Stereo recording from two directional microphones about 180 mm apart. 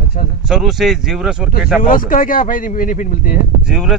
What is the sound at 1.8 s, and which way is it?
Speech, 50° left (ahead or behind).